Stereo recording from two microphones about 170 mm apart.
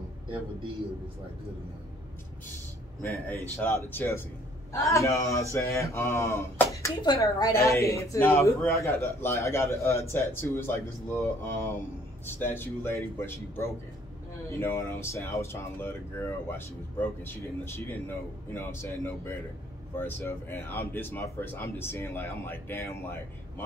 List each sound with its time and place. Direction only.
0.3 s a man's voice: 30° right (ahead or behind)
3.0 s a woman's voice: 10° left (ahead or behind)